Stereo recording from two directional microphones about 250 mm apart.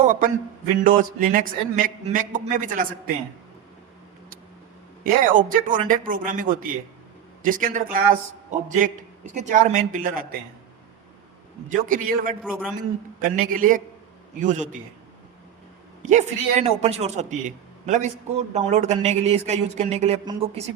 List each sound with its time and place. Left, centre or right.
0.0 s a man's voice: right
5.0 s a man's voice: right
11.7 s a man's voice: right
12.4 s a man's voice: centre
13.2 s a man's voice: right
16.0 s speech: right